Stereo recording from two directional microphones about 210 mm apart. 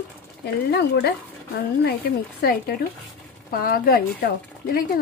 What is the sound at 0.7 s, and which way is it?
Speech, 50° left (ahead or behind).